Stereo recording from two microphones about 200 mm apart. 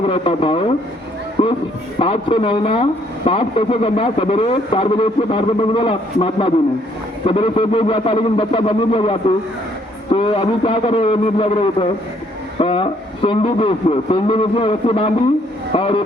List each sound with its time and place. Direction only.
0.0 s speech: 25° left (ahead or behind)